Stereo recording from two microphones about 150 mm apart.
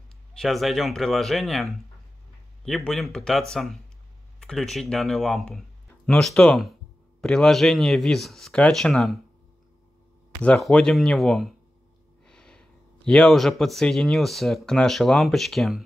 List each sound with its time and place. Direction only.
0.4 s speech: centre (ahead or behind)
10.4 s speech: 5° left (ahead or behind)